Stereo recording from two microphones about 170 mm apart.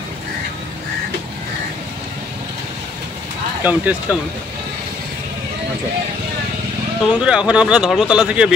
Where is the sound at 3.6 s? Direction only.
10° right (ahead or behind).